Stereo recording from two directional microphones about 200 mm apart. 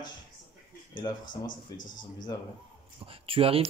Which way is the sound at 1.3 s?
40° left (ahead or behind).